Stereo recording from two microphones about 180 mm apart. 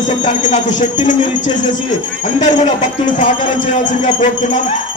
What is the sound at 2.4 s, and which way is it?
Speech, 40° left (ahead or behind).